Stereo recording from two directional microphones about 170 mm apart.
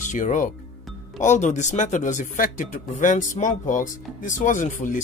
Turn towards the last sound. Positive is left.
turn(degrees=45)  # may be behind; listen again after turning